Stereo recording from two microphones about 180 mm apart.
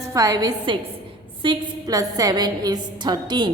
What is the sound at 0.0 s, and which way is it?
A woman's voice, 20° right (ahead or behind).